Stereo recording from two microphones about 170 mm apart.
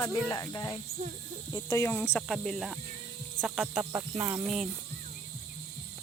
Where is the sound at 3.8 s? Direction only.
15° right (ahead or behind).